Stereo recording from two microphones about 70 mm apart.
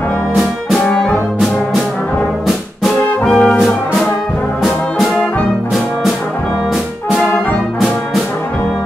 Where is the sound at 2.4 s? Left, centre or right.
Centre.